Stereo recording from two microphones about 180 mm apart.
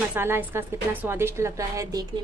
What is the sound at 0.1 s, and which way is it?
A woman's voice, 10° right (ahead or behind).